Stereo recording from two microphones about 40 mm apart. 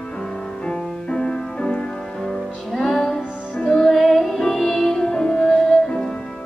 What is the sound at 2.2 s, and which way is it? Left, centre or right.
Music, centre.